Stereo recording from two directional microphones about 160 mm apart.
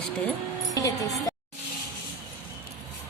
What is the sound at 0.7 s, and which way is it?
Music, 20° left (ahead or behind).